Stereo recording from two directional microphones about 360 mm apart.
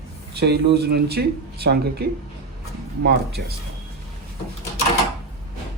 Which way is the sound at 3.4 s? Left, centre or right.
Right.